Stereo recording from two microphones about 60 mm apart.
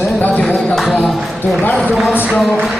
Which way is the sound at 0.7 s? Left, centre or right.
Centre.